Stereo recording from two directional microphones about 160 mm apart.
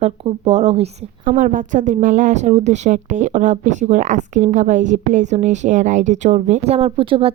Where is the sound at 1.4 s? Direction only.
55° right (ahead or behind).